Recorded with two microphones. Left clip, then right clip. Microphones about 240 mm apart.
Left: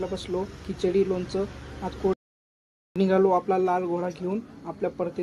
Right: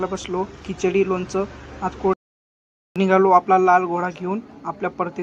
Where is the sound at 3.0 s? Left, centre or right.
Centre.